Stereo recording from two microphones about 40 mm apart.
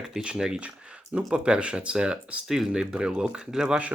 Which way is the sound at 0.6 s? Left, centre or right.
Right.